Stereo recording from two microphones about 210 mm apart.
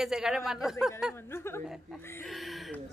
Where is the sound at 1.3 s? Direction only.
10° left (ahead or behind).